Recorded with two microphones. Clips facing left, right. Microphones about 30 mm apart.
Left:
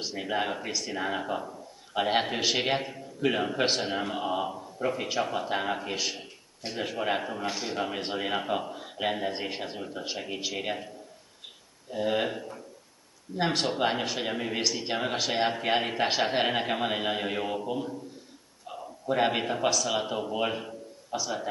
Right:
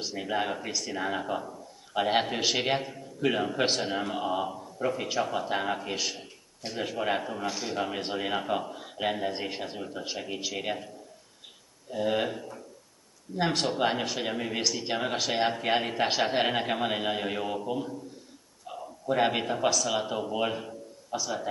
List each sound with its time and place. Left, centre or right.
0.0 s a man's voice: centre
6.1 s a man's voice: centre
11.9 s a man's voice: centre
12.3 s speech: left
13.4 s a man's voice: centre
18.7 s a sound: centre
19.4 s a man's voice: centre